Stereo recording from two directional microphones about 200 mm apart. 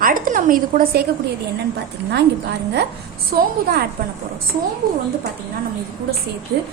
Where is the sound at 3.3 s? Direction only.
50° right (ahead or behind).